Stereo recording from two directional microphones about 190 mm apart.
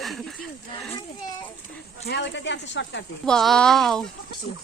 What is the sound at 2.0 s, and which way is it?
Speech, 65° left (ahead or behind).